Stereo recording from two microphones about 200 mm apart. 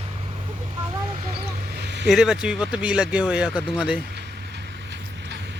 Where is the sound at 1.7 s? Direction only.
60° right (ahead or behind).